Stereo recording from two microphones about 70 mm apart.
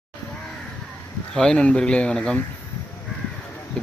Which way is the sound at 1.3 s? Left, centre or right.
Centre.